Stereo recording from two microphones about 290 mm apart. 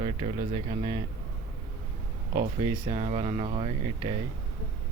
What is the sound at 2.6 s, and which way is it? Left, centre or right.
Speech, centre.